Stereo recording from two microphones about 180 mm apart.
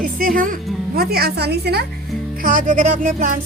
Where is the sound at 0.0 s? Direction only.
50° right (ahead or behind).